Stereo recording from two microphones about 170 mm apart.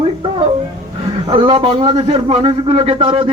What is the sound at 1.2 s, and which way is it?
A man's voice, 30° right (ahead or behind).